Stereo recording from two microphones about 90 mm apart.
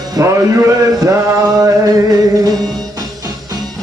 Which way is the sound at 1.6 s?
45° right (ahead or behind).